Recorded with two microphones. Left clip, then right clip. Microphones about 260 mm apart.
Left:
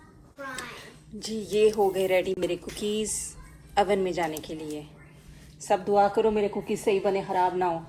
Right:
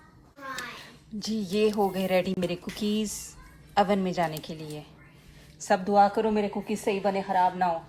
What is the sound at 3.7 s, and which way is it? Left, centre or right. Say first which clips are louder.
A woman's voice: left 1 dB; right.